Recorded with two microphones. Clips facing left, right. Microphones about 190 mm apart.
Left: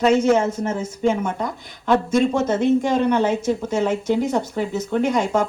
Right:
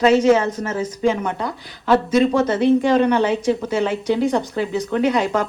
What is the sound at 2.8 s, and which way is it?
Speech, 90° right.